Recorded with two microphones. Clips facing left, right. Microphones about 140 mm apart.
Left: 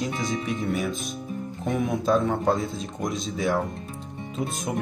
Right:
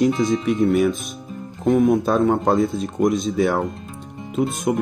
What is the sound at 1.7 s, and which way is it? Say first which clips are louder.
Speech: right 8 dB; 50° right (ahead or behind).